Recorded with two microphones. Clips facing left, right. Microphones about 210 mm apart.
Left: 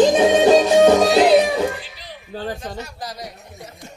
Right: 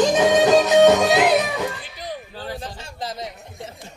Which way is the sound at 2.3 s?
45° left (ahead or behind).